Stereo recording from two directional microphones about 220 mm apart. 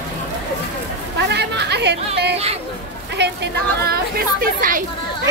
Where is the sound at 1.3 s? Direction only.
50° right (ahead or behind).